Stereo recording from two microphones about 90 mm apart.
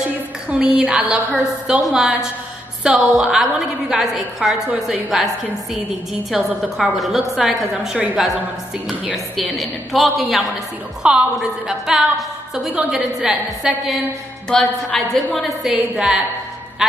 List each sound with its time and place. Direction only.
0.5 s a woman's voice: 15° right (ahead or behind)
6.3 s a woman's voice: 5° right (ahead or behind)
11.0 s a woman's voice: 10° right (ahead or behind)
14.8 s a woman's voice: 5° left (ahead or behind)